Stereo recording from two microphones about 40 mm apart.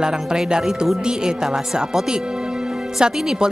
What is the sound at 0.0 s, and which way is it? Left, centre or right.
Speech, centre.